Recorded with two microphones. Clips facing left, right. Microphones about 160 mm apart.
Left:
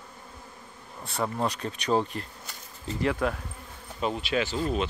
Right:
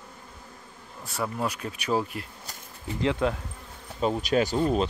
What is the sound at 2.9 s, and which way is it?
Speech, 20° right (ahead or behind).